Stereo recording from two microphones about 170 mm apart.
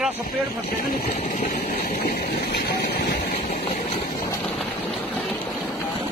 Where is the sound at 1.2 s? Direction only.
55° left (ahead or behind); by 3.6 s 70° left (ahead or behind).